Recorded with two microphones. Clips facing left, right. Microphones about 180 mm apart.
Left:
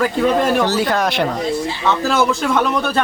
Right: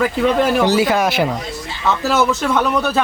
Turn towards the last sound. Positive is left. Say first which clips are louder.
# right 1 dB
turn(degrees=-5)  # may be behind; listen again after turning